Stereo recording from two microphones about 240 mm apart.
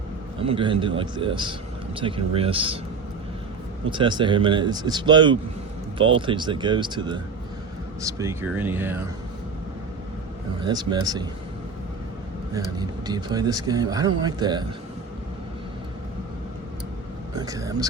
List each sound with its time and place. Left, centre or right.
0.4 s speech: right
3.8 s speech: centre
10.6 s speech: centre
12.5 s speech: centre
17.3 s speech: centre